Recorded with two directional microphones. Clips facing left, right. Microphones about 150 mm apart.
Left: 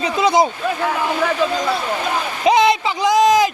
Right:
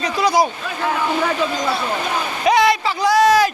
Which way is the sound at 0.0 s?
25° left (ahead or behind).